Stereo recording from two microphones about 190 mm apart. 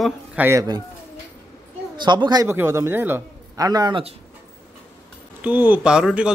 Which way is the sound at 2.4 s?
10° right (ahead or behind).